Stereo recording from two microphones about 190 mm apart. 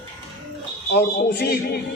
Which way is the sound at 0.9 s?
55° left (ahead or behind).